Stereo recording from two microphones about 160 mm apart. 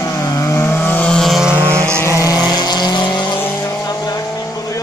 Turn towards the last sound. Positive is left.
turn(degrees=20)  # may be behind; listen again after turning